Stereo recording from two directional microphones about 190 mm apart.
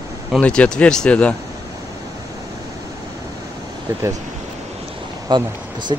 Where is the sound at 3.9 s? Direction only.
15° right (ahead or behind).